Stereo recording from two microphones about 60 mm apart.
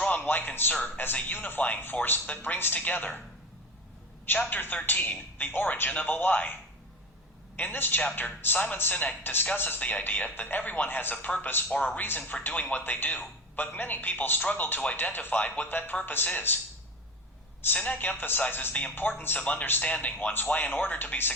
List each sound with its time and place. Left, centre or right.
0.2 s a man's voice: left
4.4 s speech: left
7.5 s speech: left
17.7 s speech: left
19.5 s speech: left